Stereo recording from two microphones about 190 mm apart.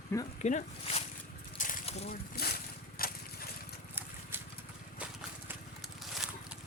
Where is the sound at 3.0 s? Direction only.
50° left (ahead or behind).